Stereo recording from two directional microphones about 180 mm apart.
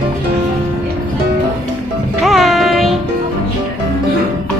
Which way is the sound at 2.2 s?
Centre (ahead or behind).